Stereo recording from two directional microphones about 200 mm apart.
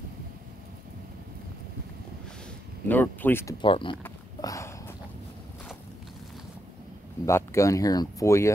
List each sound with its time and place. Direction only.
2.9 s speech: 10° left (ahead or behind)
3.6 s speech: 25° left (ahead or behind)
4.0 s a sound: 15° left (ahead or behind)
7.2 s speech: 15° left (ahead or behind)